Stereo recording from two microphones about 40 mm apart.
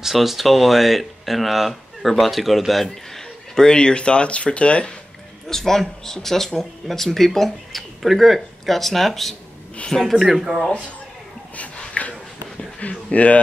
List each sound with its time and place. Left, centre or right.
0.0 s speech: centre
3.5 s speech: centre
5.5 s speech: centre
11.5 s dog: left
12.8 s speech: left